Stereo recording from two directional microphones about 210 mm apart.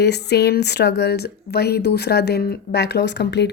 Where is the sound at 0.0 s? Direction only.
50° left (ahead or behind).